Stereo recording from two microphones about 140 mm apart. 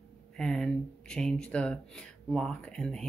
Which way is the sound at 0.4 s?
5° left (ahead or behind).